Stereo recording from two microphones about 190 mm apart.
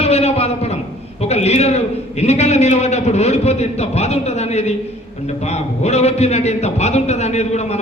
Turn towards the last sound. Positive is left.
turn(degrees=35)  # may be behind; listen again after turning